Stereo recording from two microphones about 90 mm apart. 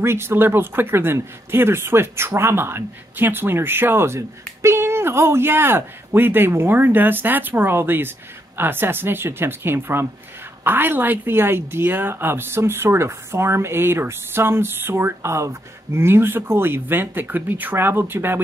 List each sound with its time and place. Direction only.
0.0 s a woman's voice: 25° right (ahead or behind)